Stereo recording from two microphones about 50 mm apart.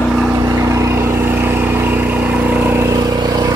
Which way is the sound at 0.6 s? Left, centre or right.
Right.